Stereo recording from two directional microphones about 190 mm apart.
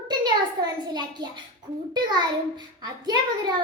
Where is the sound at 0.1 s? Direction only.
20° right (ahead or behind).